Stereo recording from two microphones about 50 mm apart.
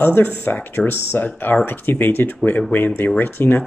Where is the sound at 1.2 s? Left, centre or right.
Left.